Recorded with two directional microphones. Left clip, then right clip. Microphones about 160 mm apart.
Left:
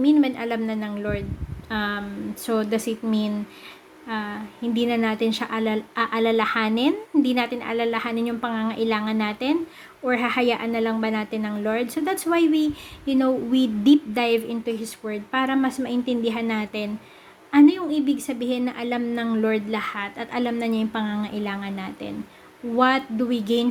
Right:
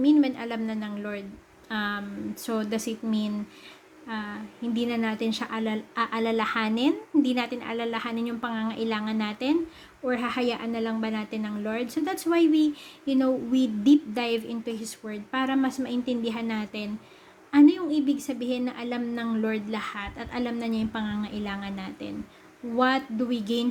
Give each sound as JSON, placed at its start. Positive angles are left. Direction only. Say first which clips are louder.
{"t": 0.0, "sound": "a woman's voice", "louder": "left 3 dB", "side_deg": 5}